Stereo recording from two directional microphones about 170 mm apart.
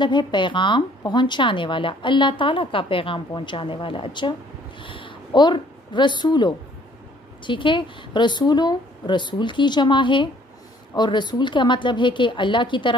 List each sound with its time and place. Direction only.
0.0 s a woman's voice: 25° left (ahead or behind)